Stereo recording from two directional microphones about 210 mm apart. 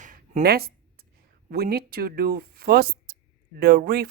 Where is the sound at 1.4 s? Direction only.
50° right (ahead or behind).